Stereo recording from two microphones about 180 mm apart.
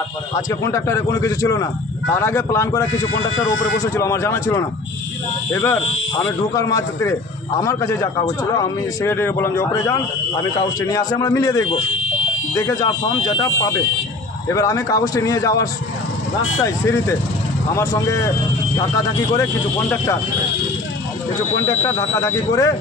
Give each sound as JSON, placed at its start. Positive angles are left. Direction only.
{"t": 0.5, "sound": "a man's voice", "side_deg": 15}
{"t": 17.7, "sound": "speech", "side_deg": 15}
{"t": 21.5, "sound": "speech", "side_deg": 15}